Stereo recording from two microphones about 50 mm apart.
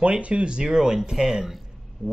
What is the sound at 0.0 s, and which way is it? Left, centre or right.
Speech, right.